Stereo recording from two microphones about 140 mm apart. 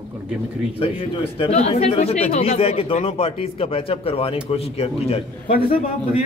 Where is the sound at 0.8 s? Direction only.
45° left (ahead or behind).